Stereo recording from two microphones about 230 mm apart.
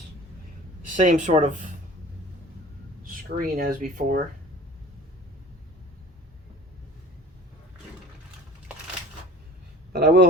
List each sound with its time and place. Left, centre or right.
0.9 s speech: right
3.0 s speech: right
9.9 s speech: right